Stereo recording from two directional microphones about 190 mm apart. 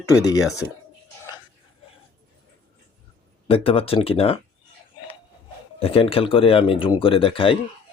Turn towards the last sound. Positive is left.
turn(degrees=30)  # may be behind; listen again after turning